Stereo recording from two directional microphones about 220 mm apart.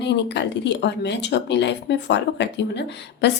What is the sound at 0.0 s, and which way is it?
Speech, 50° left (ahead or behind).